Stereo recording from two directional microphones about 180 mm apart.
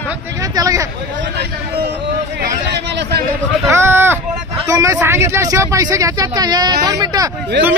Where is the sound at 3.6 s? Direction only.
15° right (ahead or behind).